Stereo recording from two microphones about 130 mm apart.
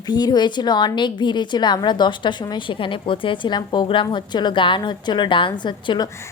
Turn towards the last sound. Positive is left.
turn(degrees=35)  # may be behind; listen again after turning